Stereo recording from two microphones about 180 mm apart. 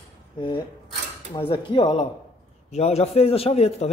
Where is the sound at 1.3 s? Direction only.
25° left (ahead or behind).